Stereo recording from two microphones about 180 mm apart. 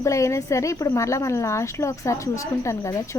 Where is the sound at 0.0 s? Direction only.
15° left (ahead or behind).